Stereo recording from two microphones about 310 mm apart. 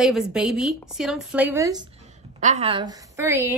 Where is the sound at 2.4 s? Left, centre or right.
Right.